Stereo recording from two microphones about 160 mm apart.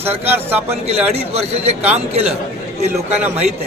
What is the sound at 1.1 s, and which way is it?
A man's voice, 40° right (ahead or behind).